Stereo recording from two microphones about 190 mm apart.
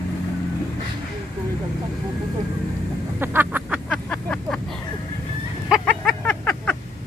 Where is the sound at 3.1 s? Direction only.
10° right (ahead or behind).